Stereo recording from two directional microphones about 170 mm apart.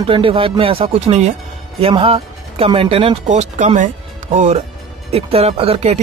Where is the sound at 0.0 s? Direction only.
30° right (ahead or behind).